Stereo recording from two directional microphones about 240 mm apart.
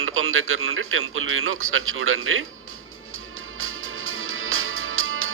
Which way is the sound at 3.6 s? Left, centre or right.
Right.